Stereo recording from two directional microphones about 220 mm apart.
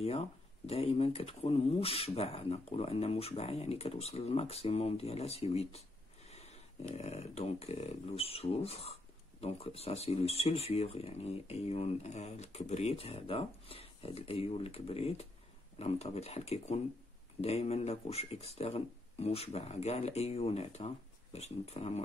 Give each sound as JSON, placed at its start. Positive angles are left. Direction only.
{"t": 0.0, "sound": "speech", "side_deg": 25}